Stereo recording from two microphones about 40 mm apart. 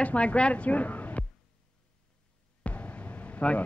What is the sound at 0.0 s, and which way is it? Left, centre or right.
Speech, left.